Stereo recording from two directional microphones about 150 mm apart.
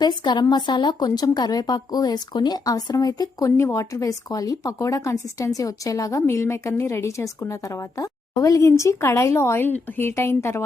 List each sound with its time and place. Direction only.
0.0 s a woman's voice: 30° left (ahead or behind)